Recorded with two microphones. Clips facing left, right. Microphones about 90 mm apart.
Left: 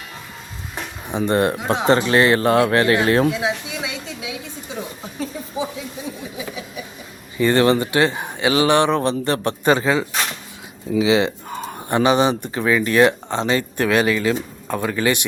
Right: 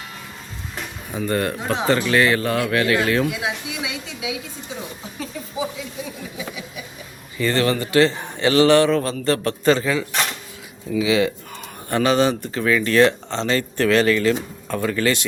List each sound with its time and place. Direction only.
1.0 s speech: 25° left (ahead or behind)
7.3 s speech: 25° left (ahead or behind)
10.9 s speech: 25° left (ahead or behind)